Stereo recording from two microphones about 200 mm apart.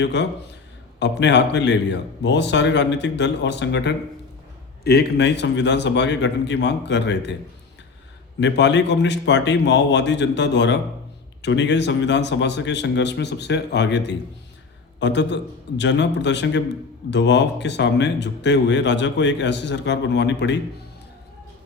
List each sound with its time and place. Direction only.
0.0 s speech: 60° left (ahead or behind)
8.4 s a man's voice: 60° left (ahead or behind)